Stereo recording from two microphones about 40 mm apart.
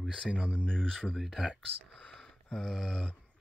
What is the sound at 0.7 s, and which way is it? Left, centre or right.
Speech, centre.